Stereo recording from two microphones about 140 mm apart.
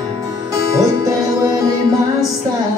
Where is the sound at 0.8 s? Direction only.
25° right (ahead or behind).